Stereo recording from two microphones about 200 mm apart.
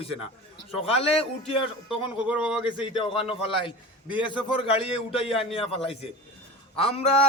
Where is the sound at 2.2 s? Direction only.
5° right (ahead or behind).